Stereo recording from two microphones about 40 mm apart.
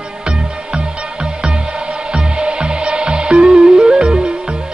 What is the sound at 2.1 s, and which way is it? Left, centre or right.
Music, right.